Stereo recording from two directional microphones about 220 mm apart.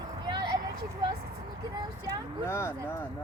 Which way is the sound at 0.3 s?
20° right (ahead or behind).